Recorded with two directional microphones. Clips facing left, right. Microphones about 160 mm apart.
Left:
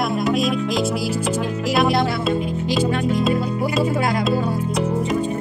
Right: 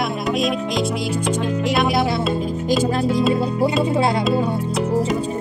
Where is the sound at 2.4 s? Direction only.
40° right (ahead or behind).